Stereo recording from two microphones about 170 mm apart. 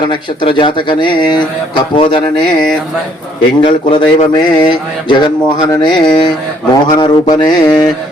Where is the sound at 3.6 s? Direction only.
30° left (ahead or behind).